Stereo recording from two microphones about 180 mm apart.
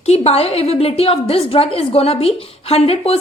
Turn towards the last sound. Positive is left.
turn(degrees=35)  # may be behind; listen again after turning